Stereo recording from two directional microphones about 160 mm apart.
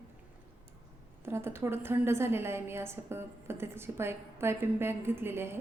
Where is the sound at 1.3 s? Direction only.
15° right (ahead or behind).